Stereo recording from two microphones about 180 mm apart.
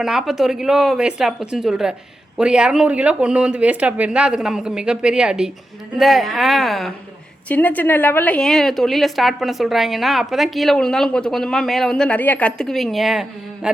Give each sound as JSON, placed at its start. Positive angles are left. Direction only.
{"t": 0.0, "sound": "a woman's voice", "side_deg": 0}